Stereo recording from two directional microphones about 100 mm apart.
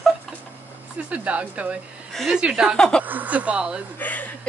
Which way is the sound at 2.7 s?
5° left (ahead or behind).